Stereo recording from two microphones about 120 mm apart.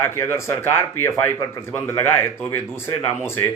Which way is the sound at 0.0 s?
20° left (ahead or behind).